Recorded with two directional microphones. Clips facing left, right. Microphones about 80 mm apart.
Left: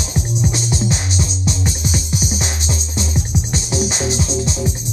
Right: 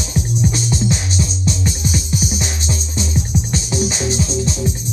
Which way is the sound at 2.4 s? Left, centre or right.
Left.